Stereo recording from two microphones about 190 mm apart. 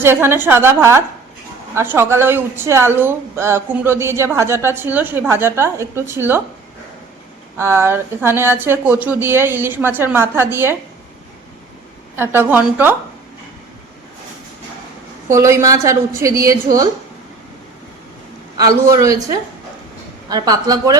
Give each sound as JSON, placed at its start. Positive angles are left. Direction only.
{"t": 0.0, "sound": "speech", "side_deg": -10}
{"t": 7.5, "sound": "speech", "side_deg": -15}
{"t": 12.1, "sound": "speech", "side_deg": -10}
{"t": 15.3, "sound": "speech", "side_deg": -15}
{"t": 18.5, "sound": "a woman's voice", "side_deg": -20}